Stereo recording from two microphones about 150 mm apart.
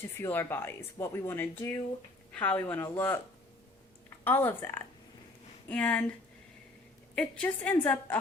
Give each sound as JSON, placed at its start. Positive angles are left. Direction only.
{"t": 0.2, "sound": "speech", "side_deg": 15}
{"t": 4.2, "sound": "speech", "side_deg": 15}
{"t": 7.2, "sound": "speech", "side_deg": 5}